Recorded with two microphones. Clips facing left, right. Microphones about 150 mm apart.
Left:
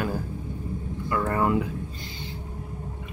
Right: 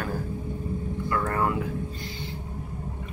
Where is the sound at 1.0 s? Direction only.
15° left (ahead or behind).